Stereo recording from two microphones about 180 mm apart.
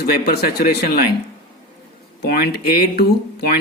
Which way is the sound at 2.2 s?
65° left (ahead or behind).